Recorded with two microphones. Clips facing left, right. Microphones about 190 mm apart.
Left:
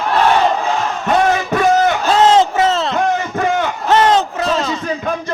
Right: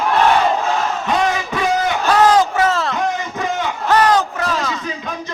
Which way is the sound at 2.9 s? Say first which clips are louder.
Left 4 dB; 50° left (ahead or behind).